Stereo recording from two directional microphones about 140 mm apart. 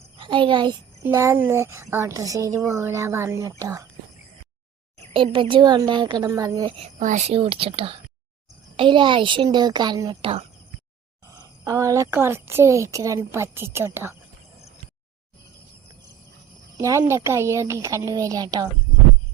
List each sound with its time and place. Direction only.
0.2 s a child's voice: 35° right (ahead or behind)
1.1 s a woman's voice: 20° right (ahead or behind)
5.1 s a woman's voice: 35° right (ahead or behind)
7.0 s a woman's voice: 60° right (ahead or behind); by 10.3 s 35° right (ahead or behind)
11.3 s a woman's voice: 25° right (ahead or behind)
16.7 s a woman's voice: 20° right (ahead or behind)